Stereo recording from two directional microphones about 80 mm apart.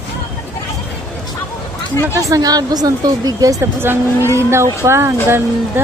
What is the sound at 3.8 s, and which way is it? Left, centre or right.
Speech, right.